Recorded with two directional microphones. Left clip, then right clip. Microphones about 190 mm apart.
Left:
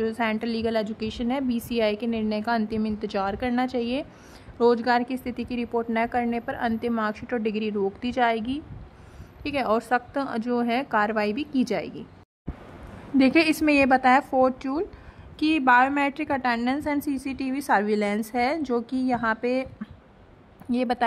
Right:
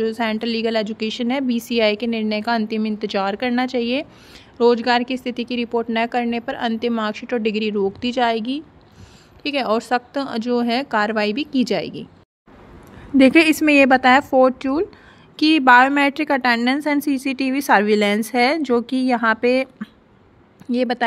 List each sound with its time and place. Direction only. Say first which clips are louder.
0.0 s a woman's voice: right 5 dB; 20° right (ahead or behind)
13.2 s a woman's voice: right 7 dB; 20° right (ahead or behind)